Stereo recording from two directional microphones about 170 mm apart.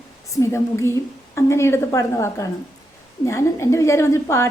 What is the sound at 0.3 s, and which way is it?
A woman's voice, 15° left (ahead or behind).